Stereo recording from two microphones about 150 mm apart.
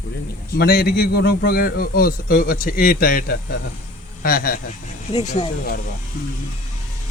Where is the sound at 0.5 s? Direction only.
90° left.